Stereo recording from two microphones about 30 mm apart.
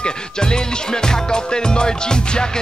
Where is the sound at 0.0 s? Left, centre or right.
Left.